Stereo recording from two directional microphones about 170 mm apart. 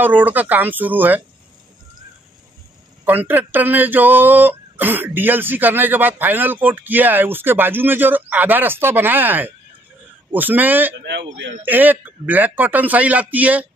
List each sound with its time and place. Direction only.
0.0 s speech: 10° right (ahead or behind)
3.1 s speech: 10° right (ahead or behind)
11.1 s a man's voice: 90° right
11.6 s speech: 10° right (ahead or behind)